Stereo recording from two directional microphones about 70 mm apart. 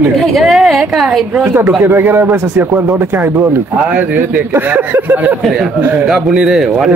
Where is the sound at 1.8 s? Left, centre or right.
Right.